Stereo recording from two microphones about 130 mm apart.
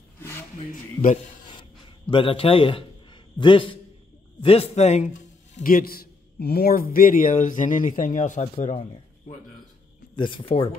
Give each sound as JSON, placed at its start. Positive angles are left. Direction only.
{"t": 0.7, "sound": "speech", "side_deg": 75}
{"t": 1.5, "sound": "a sound", "side_deg": 40}
{"t": 3.3, "sound": "a man's voice", "side_deg": 40}
{"t": 5.6, "sound": "a man's voice", "side_deg": 90}
{"t": 10.1, "sound": "speech", "side_deg": 40}